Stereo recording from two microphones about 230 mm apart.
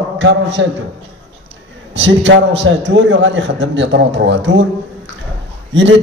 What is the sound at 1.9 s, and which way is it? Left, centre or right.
A man's voice, right.